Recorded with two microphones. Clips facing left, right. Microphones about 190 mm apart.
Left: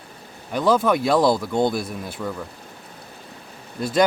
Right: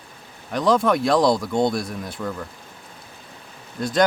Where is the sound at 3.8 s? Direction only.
5° left (ahead or behind).